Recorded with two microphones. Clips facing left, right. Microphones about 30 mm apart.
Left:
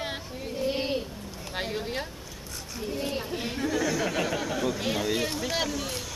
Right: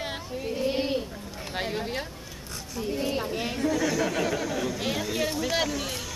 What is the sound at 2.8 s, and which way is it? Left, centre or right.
Speech, right.